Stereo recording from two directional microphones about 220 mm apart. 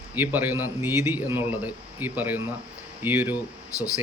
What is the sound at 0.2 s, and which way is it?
A man's voice, 10° right (ahead or behind).